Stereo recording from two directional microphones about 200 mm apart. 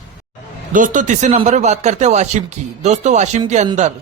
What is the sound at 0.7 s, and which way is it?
A man's voice, 40° right (ahead or behind).